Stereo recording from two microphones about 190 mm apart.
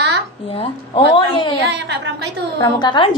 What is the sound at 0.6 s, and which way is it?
Speech, 25° left (ahead or behind).